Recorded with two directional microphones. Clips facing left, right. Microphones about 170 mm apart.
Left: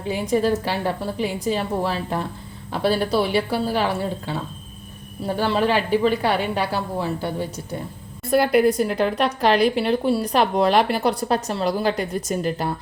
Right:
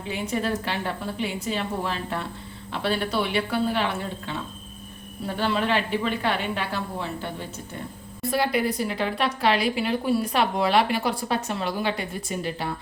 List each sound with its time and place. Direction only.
0.1 s a woman's voice: 35° left (ahead or behind)
5.4 s a woman's voice: 40° left (ahead or behind)
8.3 s a woman's voice: 50° left (ahead or behind)
9.1 s a woman's voice: 40° left (ahead or behind)